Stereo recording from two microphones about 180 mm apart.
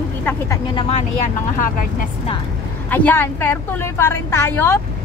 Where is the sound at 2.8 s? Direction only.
10° left (ahead or behind).